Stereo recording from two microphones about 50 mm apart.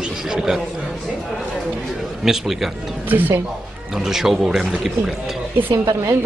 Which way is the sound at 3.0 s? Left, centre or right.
Right.